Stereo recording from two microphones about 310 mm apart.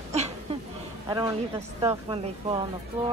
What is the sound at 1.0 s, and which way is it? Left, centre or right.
A man's voice, centre.